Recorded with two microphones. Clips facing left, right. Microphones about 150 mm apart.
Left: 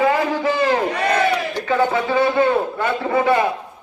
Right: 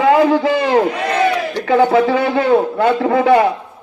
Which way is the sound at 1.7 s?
75° right (ahead or behind).